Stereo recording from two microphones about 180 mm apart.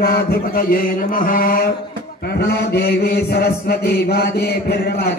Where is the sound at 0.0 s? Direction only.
60° left (ahead or behind).